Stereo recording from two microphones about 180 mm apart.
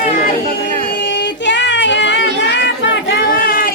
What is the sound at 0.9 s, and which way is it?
Child singing, 80° left.